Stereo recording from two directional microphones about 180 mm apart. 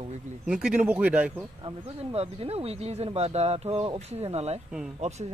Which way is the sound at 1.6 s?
30° right (ahead or behind).